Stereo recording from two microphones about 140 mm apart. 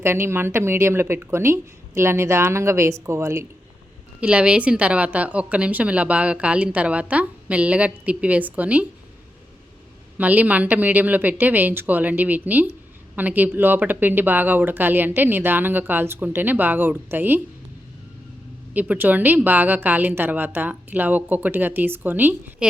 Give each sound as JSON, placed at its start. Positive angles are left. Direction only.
{"t": 0.0, "sound": "a woman's voice", "side_deg": -15}
{"t": 4.2, "sound": "a woman's voice", "side_deg": -10}
{"t": 10.2, "sound": "a woman's voice", "side_deg": -10}
{"t": 18.7, "sound": "a woman's voice", "side_deg": -10}